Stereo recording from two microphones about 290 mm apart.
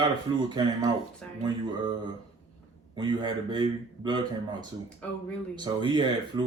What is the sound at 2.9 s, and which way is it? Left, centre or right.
Speech, centre.